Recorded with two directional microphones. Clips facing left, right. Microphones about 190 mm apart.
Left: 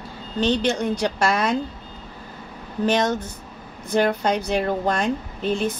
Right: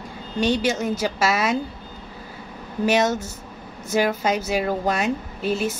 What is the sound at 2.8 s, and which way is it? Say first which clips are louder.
Speech: right 1 dB; 10° right (ahead or behind).